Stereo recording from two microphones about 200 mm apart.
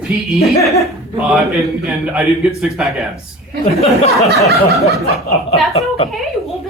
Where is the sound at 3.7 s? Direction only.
30° left (ahead or behind).